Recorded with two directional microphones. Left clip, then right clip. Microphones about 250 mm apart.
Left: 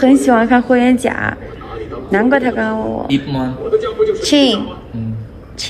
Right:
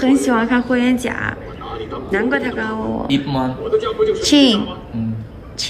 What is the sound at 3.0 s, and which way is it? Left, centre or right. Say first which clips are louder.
Speech: left 1 dB; right.